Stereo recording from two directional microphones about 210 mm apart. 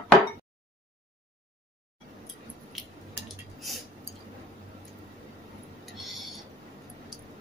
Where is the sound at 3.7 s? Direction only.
Centre (ahead or behind).